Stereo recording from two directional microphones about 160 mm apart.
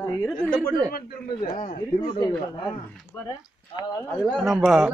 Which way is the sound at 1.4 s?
55° left (ahead or behind).